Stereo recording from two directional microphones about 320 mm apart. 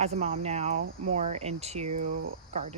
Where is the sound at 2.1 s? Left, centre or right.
Right.